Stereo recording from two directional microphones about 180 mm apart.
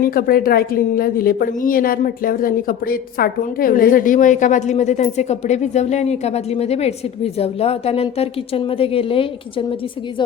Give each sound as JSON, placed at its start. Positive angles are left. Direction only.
{"t": 0.0, "sound": "a woman's voice", "side_deg": 55}